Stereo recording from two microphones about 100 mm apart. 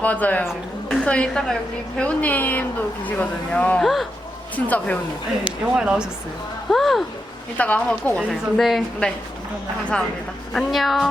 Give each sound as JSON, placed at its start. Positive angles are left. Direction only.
{"t": 0.0, "sound": "speech", "side_deg": 15}
{"t": 5.5, "sound": "speech", "side_deg": -10}
{"t": 6.7, "sound": "a woman's voice", "side_deg": 0}
{"t": 7.6, "sound": "speech", "side_deg": 15}
{"t": 8.3, "sound": "a woman's voice", "side_deg": 0}
{"t": 10.5, "sound": "a woman's voice", "side_deg": 5}